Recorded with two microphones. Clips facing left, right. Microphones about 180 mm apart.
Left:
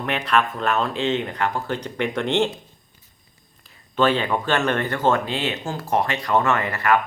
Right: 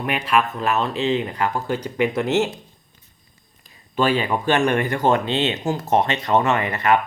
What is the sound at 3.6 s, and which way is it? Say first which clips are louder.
Speech: left 1 dB; 10° right (ahead or behind).